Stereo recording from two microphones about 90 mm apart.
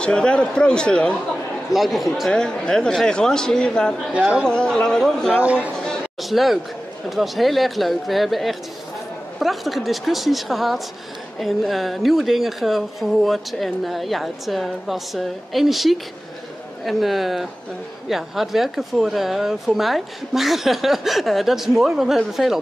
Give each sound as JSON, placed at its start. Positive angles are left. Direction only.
{"t": 0.0, "sound": "speech", "side_deg": 10}
{"t": 1.7, "sound": "speech", "side_deg": 0}
{"t": 4.1, "sound": "speech", "side_deg": -15}
{"t": 4.5, "sound": "speech", "side_deg": 10}
{"t": 5.4, "sound": "speech", "side_deg": -15}
{"t": 5.8, "sound": "a sound", "side_deg": 5}
{"t": 7.1, "sound": "a woman's voice", "side_deg": 0}